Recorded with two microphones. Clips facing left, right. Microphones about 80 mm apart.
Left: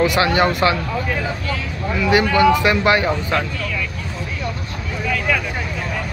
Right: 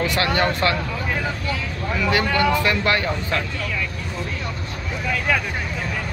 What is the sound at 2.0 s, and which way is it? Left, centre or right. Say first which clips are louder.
Speech: left 6 dB; centre.